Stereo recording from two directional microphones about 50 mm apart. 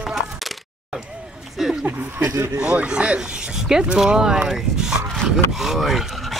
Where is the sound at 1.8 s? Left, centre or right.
Right.